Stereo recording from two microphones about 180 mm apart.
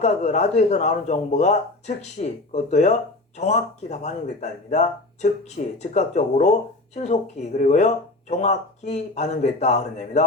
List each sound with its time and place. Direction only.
0.0 s speech: 40° left (ahead or behind)